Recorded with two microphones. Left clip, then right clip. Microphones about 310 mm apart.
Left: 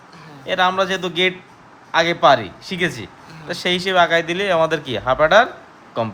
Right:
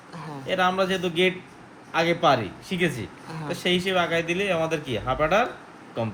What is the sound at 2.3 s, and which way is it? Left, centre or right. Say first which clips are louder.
Speech: left 4 dB; left.